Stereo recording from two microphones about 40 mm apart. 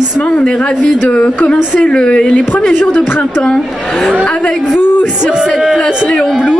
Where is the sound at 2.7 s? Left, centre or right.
Left.